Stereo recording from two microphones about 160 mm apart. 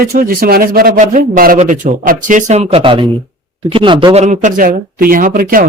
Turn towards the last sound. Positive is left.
turn(degrees=-60)  # may be behind; listen again after turning